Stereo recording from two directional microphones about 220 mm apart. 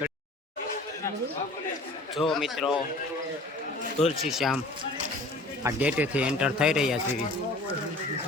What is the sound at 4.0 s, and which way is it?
Speech, 30° left (ahead or behind).